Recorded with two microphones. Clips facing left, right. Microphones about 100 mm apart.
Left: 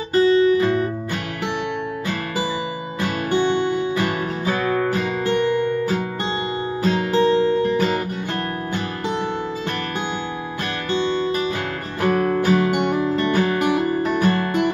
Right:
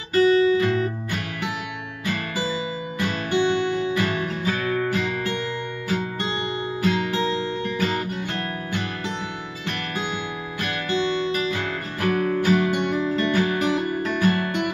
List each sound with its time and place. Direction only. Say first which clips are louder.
0.1 s music: left 2 dB; 30° left (ahead or behind)
3.0 s music: left 2 dB; 40° left (ahead or behind)
6.8 s guitar: left 5 dB; 30° left (ahead or behind)
10.9 s music: left 3 dB; 35° left (ahead or behind)